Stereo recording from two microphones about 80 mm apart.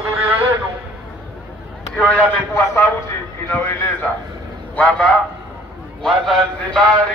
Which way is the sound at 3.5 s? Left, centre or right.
Left.